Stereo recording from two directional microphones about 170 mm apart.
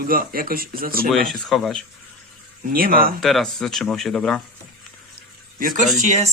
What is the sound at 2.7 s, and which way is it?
Speech, 60° right (ahead or behind).